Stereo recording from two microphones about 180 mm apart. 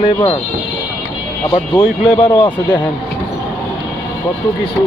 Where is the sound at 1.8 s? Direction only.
5° right (ahead or behind).